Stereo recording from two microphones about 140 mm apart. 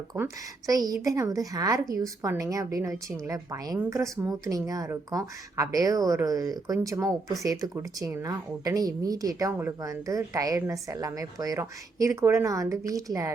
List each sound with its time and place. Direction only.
0.1 s speech: 15° right (ahead or behind)
0.7 s speech: 25° right (ahead or behind)